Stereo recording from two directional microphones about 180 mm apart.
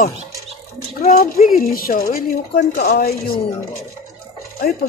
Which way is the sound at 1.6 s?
55° left (ahead or behind).